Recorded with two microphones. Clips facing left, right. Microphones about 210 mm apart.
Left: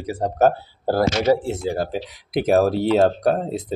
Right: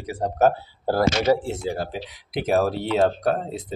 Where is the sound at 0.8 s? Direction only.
15° left (ahead or behind).